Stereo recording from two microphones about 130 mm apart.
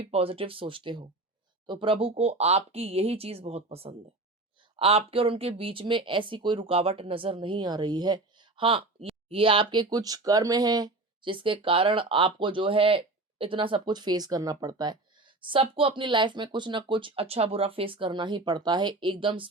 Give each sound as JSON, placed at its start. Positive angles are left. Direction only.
{"t": 0.1, "sound": "speech", "side_deg": -45}